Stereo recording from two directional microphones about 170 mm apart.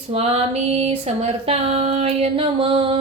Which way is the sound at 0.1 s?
35° right (ahead or behind).